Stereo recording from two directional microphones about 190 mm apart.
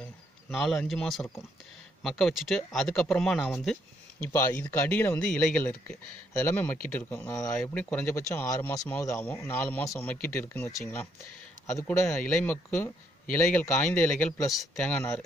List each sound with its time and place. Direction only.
0.0 s speech: centre (ahead or behind)
4.2 s speech: 15° left (ahead or behind)
12.2 s speech: 5° left (ahead or behind)